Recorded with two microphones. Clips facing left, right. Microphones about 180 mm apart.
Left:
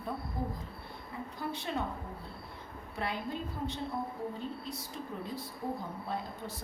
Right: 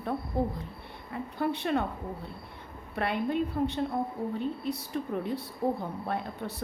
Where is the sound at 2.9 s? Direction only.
65° right (ahead or behind).